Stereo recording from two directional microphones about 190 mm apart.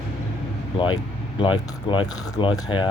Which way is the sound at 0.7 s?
25° left (ahead or behind).